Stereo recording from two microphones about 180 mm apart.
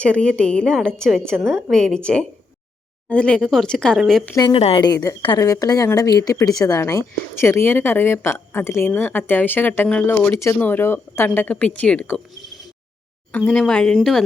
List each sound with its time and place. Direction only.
0.0 s a woman's voice: 5° left (ahead or behind)
3.1 s a woman's voice: 5° left (ahead or behind)
4.4 s a woman's voice: 25° left (ahead or behind); by 14.3 s centre (ahead or behind)